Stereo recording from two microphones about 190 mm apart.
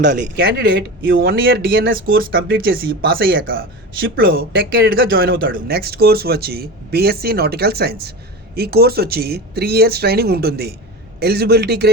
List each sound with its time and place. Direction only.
0.1 s speech: 45° right (ahead or behind)